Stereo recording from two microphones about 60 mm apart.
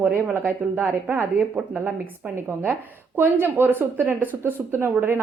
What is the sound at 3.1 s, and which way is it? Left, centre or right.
A woman's voice, right.